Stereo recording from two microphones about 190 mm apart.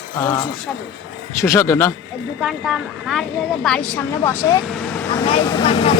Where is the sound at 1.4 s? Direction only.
15° left (ahead or behind).